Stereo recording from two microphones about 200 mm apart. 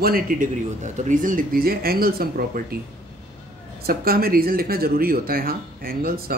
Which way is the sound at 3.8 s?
50° right (ahead or behind).